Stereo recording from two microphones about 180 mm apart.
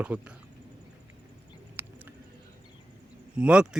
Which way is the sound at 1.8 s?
10° right (ahead or behind).